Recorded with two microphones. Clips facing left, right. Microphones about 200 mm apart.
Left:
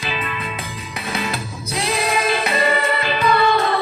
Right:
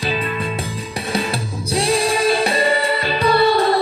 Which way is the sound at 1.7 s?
30° right (ahead or behind).